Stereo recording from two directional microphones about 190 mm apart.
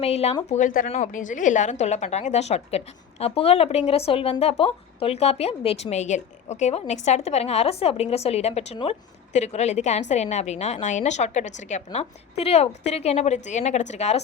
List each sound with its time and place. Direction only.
0.0 s a woman's voice: 35° left (ahead or behind)